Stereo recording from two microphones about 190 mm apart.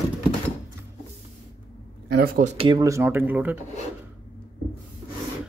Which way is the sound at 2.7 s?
20° right (ahead or behind).